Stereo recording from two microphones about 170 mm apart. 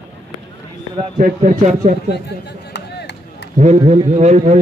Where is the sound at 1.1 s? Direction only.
45° right (ahead or behind).